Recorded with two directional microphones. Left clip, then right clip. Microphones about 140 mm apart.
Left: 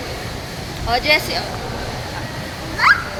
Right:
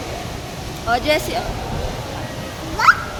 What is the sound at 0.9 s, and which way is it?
Speech, 40° right (ahead or behind).